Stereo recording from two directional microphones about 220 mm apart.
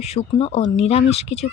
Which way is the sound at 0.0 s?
30° left (ahead or behind).